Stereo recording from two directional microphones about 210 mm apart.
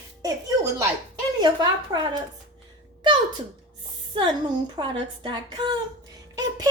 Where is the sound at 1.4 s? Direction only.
20° right (ahead or behind).